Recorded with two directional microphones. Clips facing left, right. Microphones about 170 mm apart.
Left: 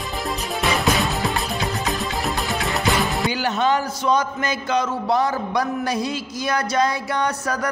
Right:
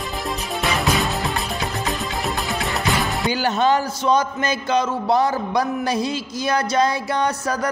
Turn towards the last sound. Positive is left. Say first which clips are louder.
# right 1 dB
turn(degrees=-30)  # may be behind; listen again after turning